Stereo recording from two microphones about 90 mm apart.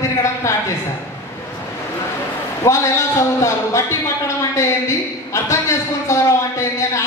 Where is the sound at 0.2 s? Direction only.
35° left (ahead or behind).